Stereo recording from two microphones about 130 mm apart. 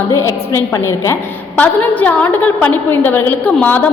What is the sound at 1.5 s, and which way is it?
A woman's voice, 10° left (ahead or behind).